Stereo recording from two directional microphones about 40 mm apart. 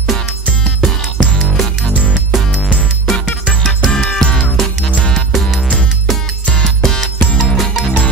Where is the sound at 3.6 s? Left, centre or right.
Centre.